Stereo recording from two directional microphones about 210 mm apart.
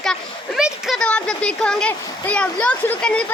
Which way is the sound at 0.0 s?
Centre (ahead or behind).